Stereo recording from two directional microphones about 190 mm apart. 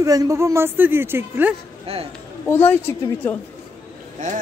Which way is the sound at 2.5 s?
10° left (ahead or behind).